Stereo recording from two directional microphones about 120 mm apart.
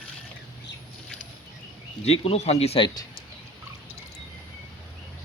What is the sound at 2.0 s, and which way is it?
Speech, 60° left (ahead or behind).